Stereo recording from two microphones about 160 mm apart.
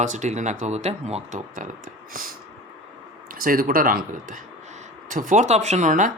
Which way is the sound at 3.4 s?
60° right (ahead or behind).